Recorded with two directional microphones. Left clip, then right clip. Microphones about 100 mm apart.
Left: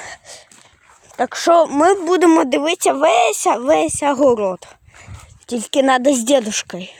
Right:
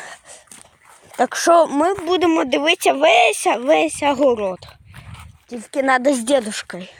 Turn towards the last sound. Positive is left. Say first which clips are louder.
# left 3 dB
turn(degrees=60)  # may be behind; listen again after turning